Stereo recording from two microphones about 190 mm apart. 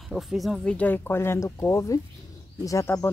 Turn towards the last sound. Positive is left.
turn(degrees=15)  # may be behind; listen again after turning